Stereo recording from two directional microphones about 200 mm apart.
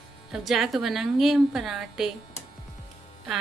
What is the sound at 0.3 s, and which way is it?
A woman's voice, centre (ahead or behind).